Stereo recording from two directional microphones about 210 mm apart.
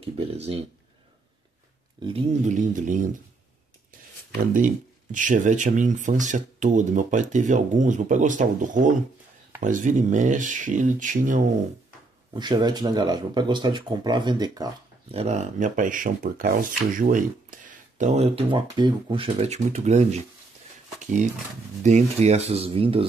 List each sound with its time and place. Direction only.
0.3 s speech: 30° right (ahead or behind)
2.0 s speech: 25° right (ahead or behind)
2.4 s speech: 35° right (ahead or behind)
4.6 s speech: 40° right (ahead or behind)
12.4 s speech: 20° right (ahead or behind)
21.8 s speech: 35° right (ahead or behind)